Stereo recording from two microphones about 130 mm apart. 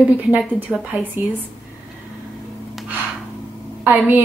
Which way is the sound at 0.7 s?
10° right (ahead or behind).